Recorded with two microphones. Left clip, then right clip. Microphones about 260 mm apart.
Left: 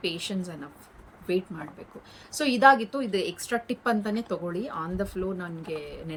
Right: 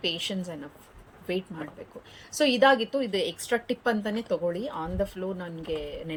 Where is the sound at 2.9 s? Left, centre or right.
Centre.